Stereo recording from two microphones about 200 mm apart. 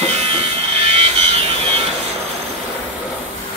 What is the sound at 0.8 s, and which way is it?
Wood, 30° right (ahead or behind).